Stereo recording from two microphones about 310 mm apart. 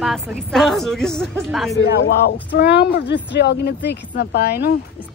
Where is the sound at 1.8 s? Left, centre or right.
Left.